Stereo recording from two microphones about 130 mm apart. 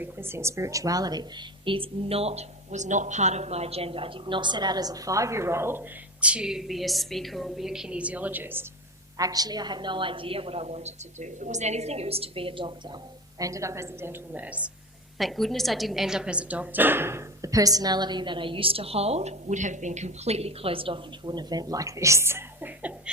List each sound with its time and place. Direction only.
0.0 s a woman's voice: 20° right (ahead or behind)
6.2 s a woman's voice: 5° right (ahead or behind)
9.1 s a woman's voice: 30° right (ahead or behind)
13.4 s a woman's voice: 25° right (ahead or behind)
15.2 s a woman's voice: centre (ahead or behind)